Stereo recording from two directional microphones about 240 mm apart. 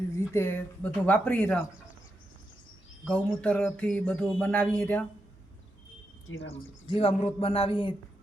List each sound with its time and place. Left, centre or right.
0.2 s speech: centre
3.0 s speech: centre
6.2 s speech: left
6.5 s speech: left